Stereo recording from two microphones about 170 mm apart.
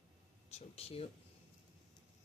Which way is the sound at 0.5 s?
35° left (ahead or behind).